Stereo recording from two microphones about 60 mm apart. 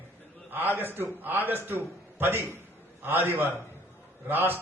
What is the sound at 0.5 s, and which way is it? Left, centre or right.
A man's voice, right.